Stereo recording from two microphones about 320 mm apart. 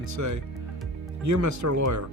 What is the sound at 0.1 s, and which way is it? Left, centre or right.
Speech, right.